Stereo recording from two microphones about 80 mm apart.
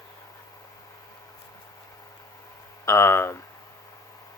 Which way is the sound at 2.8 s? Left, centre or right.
Left.